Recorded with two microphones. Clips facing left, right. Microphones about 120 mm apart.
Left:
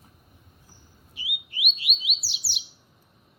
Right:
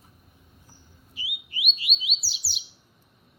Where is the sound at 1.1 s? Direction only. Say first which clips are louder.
Left 1 dB; centre (ahead or behind).